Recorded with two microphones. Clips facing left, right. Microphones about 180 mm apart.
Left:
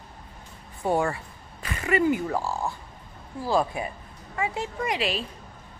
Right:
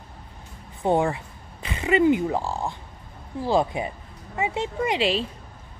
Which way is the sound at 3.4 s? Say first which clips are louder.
Right 2 dB; 20° right (ahead or behind).